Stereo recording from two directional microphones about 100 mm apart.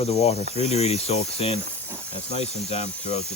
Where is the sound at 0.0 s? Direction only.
90° left.